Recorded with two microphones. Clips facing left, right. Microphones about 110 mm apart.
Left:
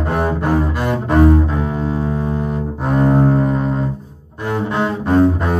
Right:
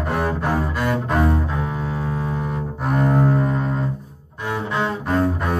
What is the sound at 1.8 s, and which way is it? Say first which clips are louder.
Music: left 6 dB; 25° left (ahead or behind).